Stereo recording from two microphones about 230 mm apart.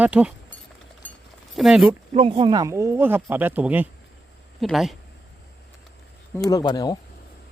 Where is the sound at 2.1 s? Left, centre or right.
Right; by 4.9 s centre.